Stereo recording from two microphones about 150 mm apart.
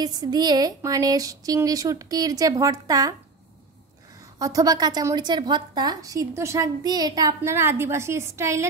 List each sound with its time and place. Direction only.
0.0 s a woman's voice: 25° right (ahead or behind)
4.4 s a woman's voice: 25° right (ahead or behind)